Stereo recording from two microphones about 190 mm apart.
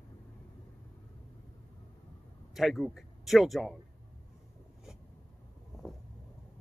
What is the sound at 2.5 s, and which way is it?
Speech, centre (ahead or behind).